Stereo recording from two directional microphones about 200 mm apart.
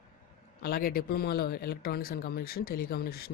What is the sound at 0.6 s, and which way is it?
Speech, 50° left (ahead or behind).